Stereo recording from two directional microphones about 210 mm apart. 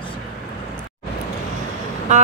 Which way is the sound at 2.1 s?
35° right (ahead or behind).